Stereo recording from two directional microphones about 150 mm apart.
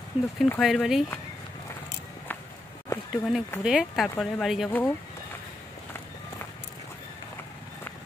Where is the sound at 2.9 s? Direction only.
15° left (ahead or behind).